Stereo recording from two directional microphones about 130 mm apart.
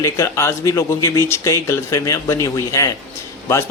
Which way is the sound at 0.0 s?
20° left (ahead or behind).